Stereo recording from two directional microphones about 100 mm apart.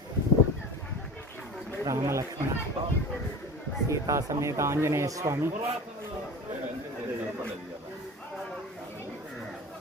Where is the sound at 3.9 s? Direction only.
30° right (ahead or behind).